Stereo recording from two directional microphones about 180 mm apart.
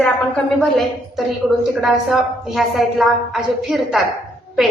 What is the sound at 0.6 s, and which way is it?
A woman's voice, centre (ahead or behind).